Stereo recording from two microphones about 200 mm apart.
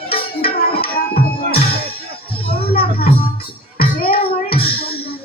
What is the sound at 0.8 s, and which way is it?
Music, 50° left (ahead or behind).